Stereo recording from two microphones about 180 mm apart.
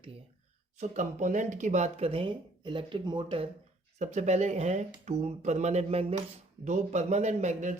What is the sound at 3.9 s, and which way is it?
Speech, 40° right (ahead or behind).